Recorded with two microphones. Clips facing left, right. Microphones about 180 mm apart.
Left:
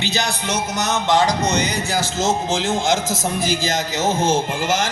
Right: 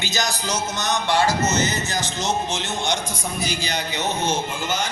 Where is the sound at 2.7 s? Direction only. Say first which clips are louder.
Left 6 dB; 90° left.